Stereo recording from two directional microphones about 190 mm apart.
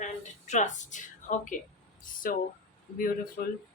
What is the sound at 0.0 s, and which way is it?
A woman's voice, 40° left (ahead or behind).